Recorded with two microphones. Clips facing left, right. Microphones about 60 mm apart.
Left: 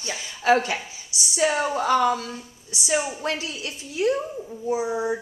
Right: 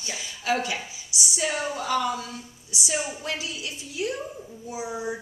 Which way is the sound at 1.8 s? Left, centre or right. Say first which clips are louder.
Left 6 dB; left.